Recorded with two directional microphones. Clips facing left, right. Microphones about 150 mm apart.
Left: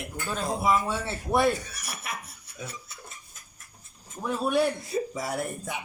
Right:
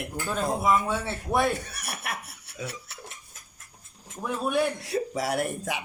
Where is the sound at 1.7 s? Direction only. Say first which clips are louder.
Right 2 dB; 60° right (ahead or behind).